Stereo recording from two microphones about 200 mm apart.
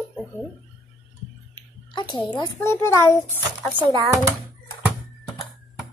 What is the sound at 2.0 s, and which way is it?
A woman's voice, 20° left (ahead or behind).